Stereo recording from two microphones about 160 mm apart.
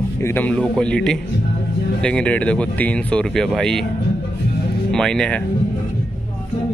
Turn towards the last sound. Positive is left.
turn(degrees=5)  # may be behind; listen again after turning